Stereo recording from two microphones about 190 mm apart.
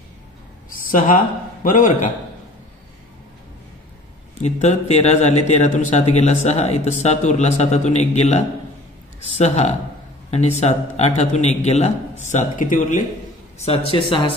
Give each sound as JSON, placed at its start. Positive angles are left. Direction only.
{"t": 0.7, "sound": "a man's voice", "side_deg": 45}
{"t": 4.4, "sound": "speech", "side_deg": 35}
{"t": 13.6, "sound": "a man's voice", "side_deg": 30}